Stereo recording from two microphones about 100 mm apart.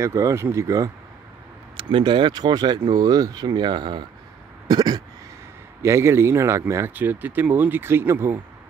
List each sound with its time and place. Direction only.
0.0 s speech: 30° right (ahead or behind)
1.8 s speech: 55° right (ahead or behind)
5.8 s speech: 25° right (ahead or behind)